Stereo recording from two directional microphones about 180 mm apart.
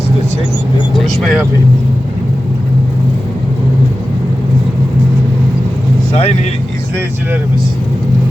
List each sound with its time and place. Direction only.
0.9 s speech: centre (ahead or behind)
6.1 s speech: 35° left (ahead or behind)